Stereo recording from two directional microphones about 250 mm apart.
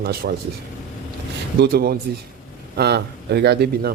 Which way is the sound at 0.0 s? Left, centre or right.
Right.